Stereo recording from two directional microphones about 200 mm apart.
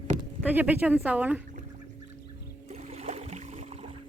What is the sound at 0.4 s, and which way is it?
Speech, 10° right (ahead or behind).